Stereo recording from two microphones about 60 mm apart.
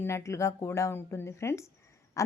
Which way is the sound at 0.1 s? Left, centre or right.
Left.